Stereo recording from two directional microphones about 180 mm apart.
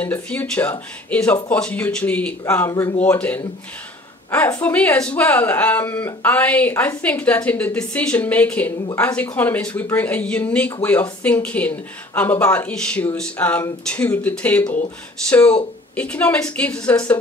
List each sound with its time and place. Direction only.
0.0 s speech: 10° left (ahead or behind)
4.6 s speech: 10° left (ahead or behind)